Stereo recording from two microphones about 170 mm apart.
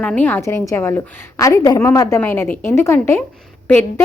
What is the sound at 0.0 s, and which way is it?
A woman's voice, 10° left (ahead or behind).